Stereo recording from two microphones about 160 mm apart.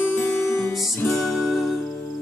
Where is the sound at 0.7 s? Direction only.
Centre (ahead or behind).